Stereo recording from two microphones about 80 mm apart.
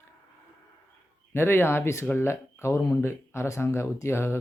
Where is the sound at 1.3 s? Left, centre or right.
Left.